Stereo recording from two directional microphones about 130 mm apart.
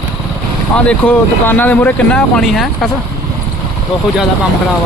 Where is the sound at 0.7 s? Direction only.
10° left (ahead or behind).